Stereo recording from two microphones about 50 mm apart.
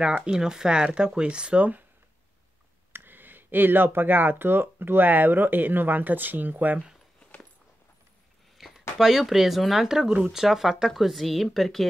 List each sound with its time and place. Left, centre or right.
0.2 s speech: centre; by 1.9 s right
2.9 s speech: right
8.5 s a sound: centre
8.9 s speech: centre